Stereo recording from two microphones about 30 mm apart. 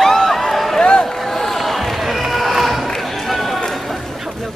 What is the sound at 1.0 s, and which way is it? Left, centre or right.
Run, centre.